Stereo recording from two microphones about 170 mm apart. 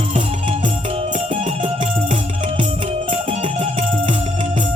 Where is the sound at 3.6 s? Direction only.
30° right (ahead or behind).